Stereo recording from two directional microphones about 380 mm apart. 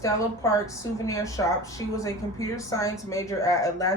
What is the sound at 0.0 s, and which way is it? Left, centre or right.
A woman's voice, centre.